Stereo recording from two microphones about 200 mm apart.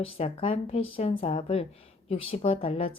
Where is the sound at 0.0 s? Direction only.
30° left (ahead or behind).